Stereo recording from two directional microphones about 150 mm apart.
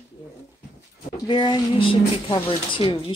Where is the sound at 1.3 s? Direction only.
30° left (ahead or behind).